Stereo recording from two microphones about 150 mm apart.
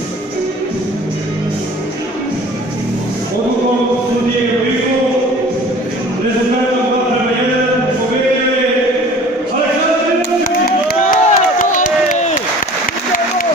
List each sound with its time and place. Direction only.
10.9 s crowd: 65° left (ahead or behind)